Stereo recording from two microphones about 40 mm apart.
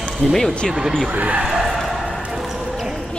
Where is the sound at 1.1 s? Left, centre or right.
Right.